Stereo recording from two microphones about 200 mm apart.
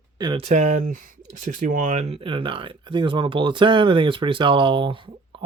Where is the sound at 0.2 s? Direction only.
25° right (ahead or behind).